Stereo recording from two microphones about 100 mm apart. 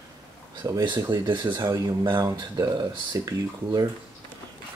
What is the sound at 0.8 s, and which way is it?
Speech, 50° right (ahead or behind).